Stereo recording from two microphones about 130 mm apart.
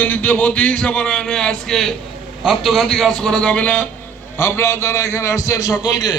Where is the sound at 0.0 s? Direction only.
10° left (ahead or behind).